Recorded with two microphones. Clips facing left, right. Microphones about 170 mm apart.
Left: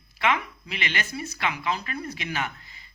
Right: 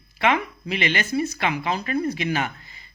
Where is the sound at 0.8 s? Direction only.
25° right (ahead or behind).